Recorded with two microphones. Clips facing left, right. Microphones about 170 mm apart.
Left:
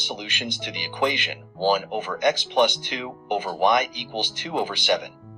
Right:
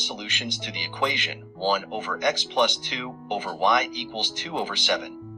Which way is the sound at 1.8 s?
55° left (ahead or behind).